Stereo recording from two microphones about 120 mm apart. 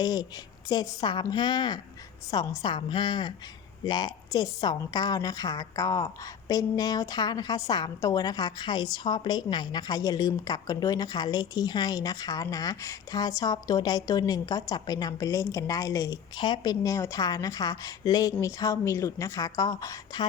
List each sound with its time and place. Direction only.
0.0 s a woman's voice: 35° left (ahead or behind)